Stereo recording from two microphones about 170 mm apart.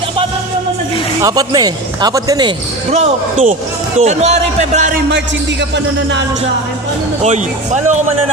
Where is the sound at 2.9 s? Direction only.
40° right (ahead or behind).